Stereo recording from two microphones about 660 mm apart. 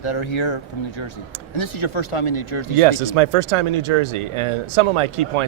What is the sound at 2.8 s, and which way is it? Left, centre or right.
Speech, right.